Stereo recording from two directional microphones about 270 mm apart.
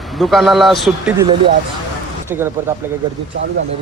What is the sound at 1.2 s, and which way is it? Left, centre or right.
Speech, centre.